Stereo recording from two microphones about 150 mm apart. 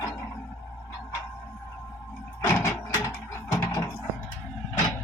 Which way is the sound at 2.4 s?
15° left (ahead or behind).